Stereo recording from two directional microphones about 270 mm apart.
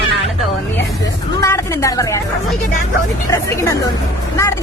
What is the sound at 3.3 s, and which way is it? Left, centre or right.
Speech, centre.